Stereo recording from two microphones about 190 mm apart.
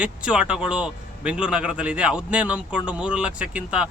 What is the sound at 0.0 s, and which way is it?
A man's voice, 5° right (ahead or behind).